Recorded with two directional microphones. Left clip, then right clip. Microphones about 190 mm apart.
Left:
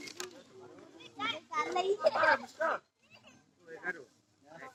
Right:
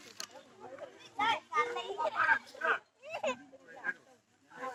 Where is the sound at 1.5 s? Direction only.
55° left (ahead or behind).